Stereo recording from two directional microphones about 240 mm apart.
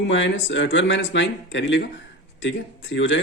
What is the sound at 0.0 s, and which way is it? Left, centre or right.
A man's voice, left.